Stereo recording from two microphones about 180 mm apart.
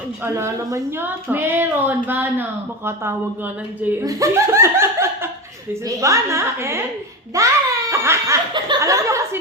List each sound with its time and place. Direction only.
0.3 s a woman's voice: 15° right (ahead or behind)